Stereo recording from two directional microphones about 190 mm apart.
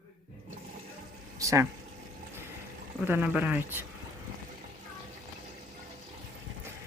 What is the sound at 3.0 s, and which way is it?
Speech, 10° right (ahead or behind).